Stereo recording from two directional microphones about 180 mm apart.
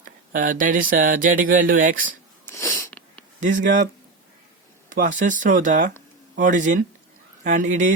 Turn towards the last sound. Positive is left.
turn(degrees=-45)  # may be behind; listen again after turning